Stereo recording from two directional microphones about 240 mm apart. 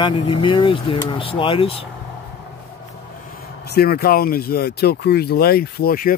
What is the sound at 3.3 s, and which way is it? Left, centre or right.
Speech, left.